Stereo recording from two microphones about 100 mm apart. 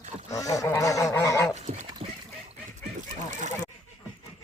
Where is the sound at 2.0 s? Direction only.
90° right.